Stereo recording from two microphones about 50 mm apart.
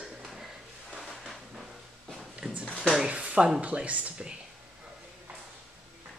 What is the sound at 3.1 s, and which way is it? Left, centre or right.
Speech, right.